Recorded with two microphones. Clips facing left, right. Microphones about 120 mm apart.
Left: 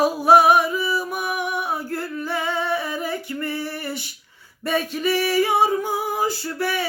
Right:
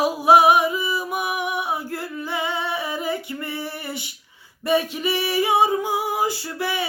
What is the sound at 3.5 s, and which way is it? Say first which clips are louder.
Female singing: left 2 dB; 15° right (ahead or behind).